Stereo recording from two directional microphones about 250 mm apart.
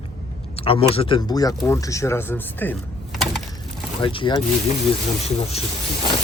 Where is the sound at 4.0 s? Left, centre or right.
Left.